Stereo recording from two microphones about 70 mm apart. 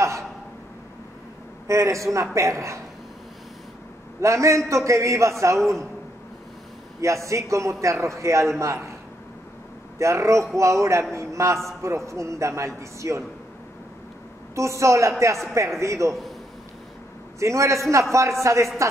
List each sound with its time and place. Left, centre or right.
1.7 s a man's voice: right
4.2 s a man's voice: right
7.0 s a man's voice: right
9.9 s a man's voice: right
14.5 s a man's voice: right
17.4 s a man's voice: right